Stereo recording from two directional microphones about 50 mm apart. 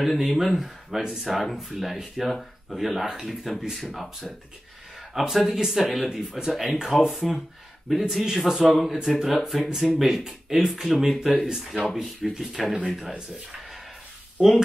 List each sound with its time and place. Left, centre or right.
0.0 s speech: centre
1.0 s speech: centre
1.3 s speech: centre
5.1 s speech: centre
14.4 s speech: centre